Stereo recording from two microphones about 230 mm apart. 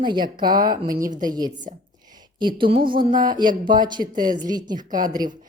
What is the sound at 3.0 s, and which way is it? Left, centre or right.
Speech, right.